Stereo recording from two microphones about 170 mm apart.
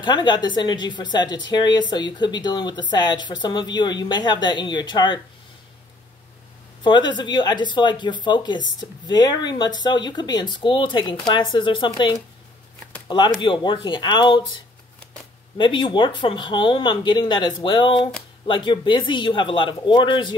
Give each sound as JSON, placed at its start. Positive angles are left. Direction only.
{"t": 0.0, "sound": "speech", "side_deg": 25}
{"t": 6.8, "sound": "speech", "side_deg": 25}
{"t": 13.4, "sound": "speech", "side_deg": 25}